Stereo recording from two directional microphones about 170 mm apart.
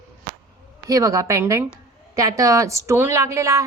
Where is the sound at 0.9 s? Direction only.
20° right (ahead or behind).